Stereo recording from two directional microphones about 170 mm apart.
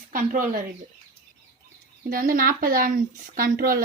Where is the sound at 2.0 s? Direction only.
55° right (ahead or behind).